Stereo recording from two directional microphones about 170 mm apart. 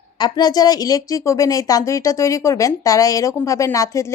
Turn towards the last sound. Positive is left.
turn(degrees=20)  # may be behind; listen again after turning